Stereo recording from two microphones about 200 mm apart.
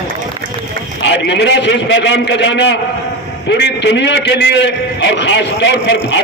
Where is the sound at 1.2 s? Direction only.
60° left (ahead or behind).